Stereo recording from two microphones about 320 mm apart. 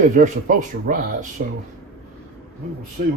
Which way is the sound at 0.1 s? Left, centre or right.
Right.